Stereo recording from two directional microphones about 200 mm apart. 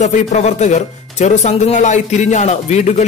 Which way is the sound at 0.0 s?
35° left (ahead or behind).